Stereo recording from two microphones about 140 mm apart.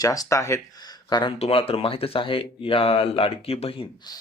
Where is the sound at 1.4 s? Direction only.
40° left (ahead or behind).